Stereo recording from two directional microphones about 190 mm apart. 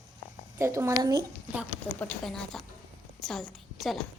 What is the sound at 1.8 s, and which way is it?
A woman's voice, 5° left (ahead or behind).